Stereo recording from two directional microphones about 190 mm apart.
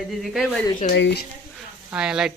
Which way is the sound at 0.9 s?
70° left (ahead or behind).